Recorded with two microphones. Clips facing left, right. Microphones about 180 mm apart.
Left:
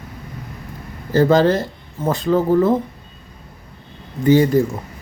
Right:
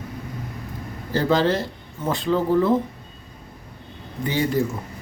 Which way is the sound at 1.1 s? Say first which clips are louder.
Left 6 dB; 45° left (ahead or behind).